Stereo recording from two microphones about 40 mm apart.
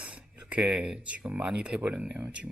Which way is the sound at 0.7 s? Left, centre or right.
Centre.